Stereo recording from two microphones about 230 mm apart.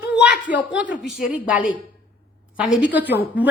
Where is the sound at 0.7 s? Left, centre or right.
Centre.